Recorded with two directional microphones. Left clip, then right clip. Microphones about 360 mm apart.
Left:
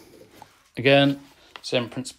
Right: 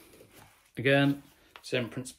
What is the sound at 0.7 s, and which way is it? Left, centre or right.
Speech, centre.